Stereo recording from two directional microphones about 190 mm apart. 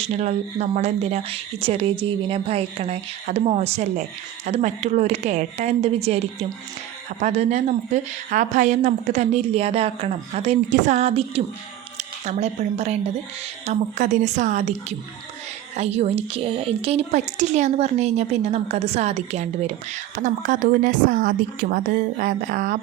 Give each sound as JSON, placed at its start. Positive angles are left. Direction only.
{"t": 0.0, "sound": "a woman's voice", "side_deg": -35}